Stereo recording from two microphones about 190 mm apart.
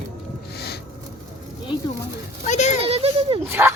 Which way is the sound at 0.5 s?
55° left (ahead or behind).